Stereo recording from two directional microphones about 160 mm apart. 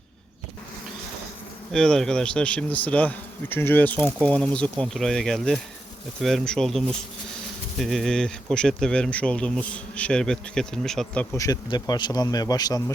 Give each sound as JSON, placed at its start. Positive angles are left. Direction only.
{"t": 1.7, "sound": "speech", "side_deg": 5}
{"t": 11.3, "sound": "speech", "side_deg": 20}